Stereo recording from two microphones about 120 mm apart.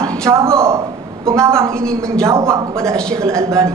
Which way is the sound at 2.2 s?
25° right (ahead or behind).